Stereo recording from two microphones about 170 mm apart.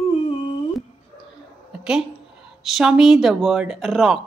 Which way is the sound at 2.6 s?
Centre (ahead or behind).